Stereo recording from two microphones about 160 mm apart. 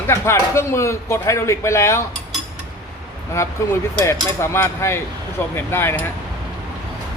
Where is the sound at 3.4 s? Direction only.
15° left (ahead or behind).